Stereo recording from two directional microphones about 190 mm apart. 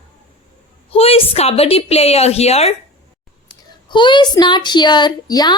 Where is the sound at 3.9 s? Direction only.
25° left (ahead or behind).